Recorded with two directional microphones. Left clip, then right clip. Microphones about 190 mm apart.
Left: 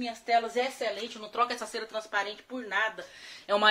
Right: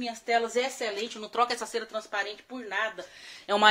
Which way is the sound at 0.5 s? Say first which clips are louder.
Right 1 dB; 55° right (ahead or behind).